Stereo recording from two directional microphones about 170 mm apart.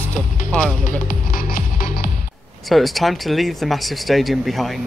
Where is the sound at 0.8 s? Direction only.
55° left (ahead or behind).